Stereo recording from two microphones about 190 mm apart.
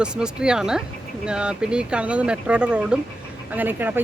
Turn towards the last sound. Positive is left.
turn(degrees=-10)  # may be behind; listen again after turning